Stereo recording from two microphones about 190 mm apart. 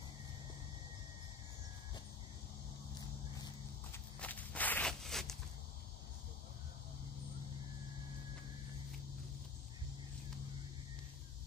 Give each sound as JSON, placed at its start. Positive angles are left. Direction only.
{"t": 4.2, "sound": "walk", "side_deg": 10}